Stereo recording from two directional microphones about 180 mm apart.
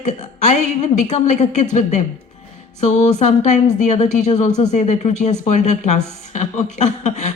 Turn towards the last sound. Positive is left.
turn(degrees=40)  # may be behind; listen again after turning